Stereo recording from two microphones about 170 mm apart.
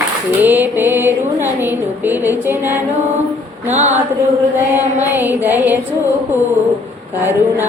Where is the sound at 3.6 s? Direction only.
40° right (ahead or behind).